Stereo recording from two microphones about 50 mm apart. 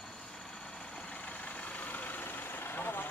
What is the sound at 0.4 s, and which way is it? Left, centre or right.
Vehicle, centre.